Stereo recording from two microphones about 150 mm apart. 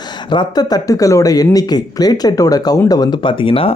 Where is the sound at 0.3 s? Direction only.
30° left (ahead or behind).